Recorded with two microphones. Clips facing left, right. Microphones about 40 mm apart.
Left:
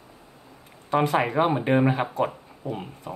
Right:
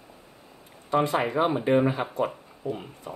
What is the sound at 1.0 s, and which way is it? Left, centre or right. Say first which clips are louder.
Speech: left 3 dB; left.